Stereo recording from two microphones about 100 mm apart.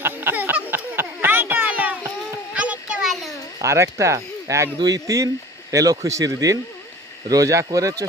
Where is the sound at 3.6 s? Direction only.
30° right (ahead or behind).